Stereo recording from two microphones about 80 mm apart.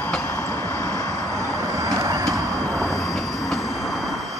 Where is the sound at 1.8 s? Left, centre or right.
Right.